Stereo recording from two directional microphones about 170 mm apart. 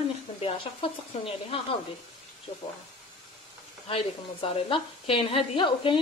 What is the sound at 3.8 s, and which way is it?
Speech, 30° left (ahead or behind).